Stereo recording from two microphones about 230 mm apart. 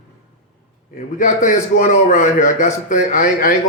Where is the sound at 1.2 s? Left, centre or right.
Left.